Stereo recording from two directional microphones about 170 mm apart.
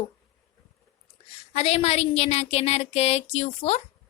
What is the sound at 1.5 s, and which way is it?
A woman's voice, 40° left (ahead or behind).